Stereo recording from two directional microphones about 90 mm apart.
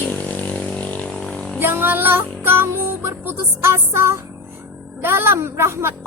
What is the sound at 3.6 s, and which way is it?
A woman's voice, 30° right (ahead or behind).